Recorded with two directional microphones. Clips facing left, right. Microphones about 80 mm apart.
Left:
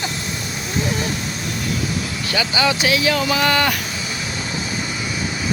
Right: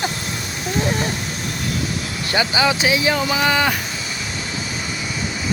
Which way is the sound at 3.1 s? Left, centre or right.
Centre.